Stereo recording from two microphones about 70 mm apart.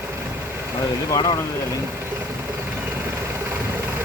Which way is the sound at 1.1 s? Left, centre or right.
Left.